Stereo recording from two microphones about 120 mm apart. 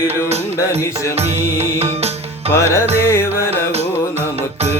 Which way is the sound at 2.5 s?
25° left (ahead or behind).